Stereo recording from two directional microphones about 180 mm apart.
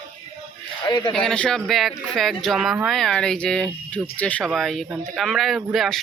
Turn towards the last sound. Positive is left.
turn(degrees=0)  # may be behind; listen again after turning